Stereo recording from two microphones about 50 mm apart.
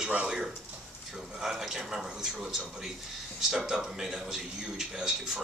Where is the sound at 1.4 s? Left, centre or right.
Centre.